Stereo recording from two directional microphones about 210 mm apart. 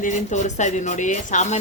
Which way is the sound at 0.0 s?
35° left (ahead or behind).